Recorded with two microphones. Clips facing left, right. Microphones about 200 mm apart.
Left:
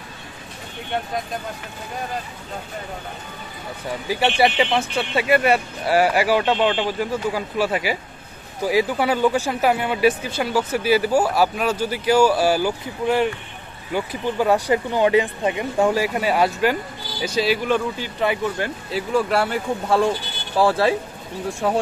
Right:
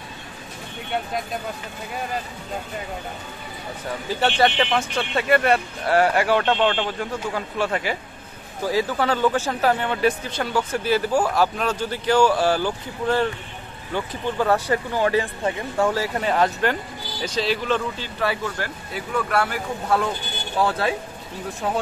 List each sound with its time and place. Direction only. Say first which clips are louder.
4.1 s speech: left 1 dB; 10° left (ahead or behind); by 20.9 s 30° left (ahead or behind)